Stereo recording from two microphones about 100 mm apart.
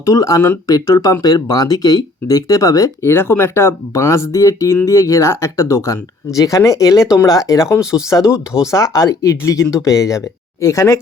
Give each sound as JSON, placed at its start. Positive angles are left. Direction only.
{"t": 0.0, "sound": "speech", "side_deg": 35}
{"t": 3.1, "sound": "speech", "side_deg": 20}